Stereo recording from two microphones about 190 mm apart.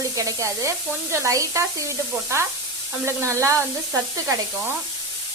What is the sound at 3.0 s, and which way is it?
Speech, 15° right (ahead or behind).